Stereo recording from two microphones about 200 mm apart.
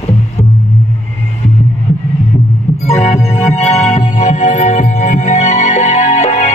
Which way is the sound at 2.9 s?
30° left (ahead or behind).